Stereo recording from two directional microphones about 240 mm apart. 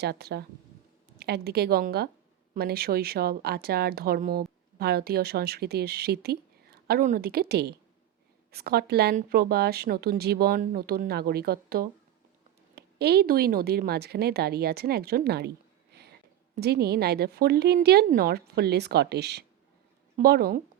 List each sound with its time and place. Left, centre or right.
0.0 s speech: right